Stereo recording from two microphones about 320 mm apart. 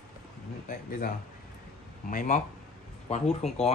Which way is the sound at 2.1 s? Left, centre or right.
Left.